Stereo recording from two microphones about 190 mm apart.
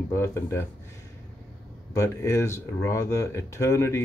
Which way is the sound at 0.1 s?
15° left (ahead or behind).